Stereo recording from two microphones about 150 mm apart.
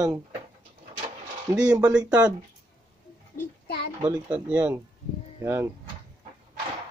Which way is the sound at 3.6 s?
90° left.